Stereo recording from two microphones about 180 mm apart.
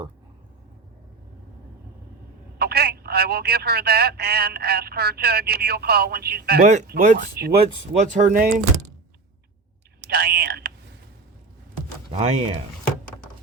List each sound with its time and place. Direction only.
2.6 s speech: 60° right (ahead or behind)
6.8 s speech: 50° right (ahead or behind)
10.1 s speech: 60° right (ahead or behind)
12.1 s speech: 30° right (ahead or behind)